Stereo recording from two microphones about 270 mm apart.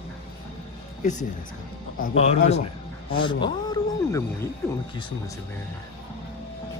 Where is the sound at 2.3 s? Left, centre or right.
Left.